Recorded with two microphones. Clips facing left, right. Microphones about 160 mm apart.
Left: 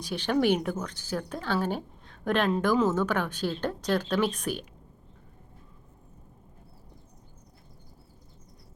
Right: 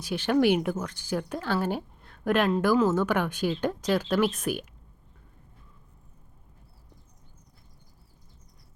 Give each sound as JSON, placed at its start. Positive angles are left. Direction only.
{"t": 0.0, "sound": "speech", "side_deg": -10}